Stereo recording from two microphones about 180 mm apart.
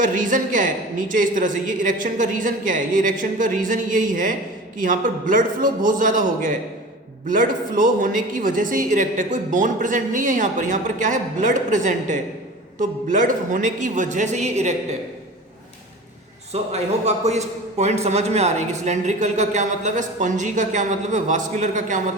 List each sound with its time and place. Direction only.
0.0 s speech: 45° right (ahead or behind)
16.5 s a man's voice: 35° right (ahead or behind)